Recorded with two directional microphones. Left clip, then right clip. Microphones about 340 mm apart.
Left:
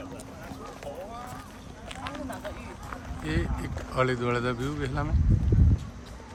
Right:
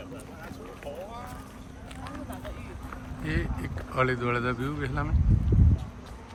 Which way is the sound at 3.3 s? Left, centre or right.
Centre.